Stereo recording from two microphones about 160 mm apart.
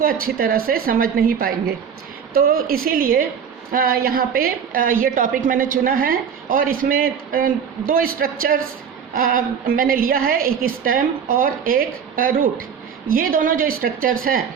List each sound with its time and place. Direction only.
0.0 s a woman's voice: 65° right (ahead or behind)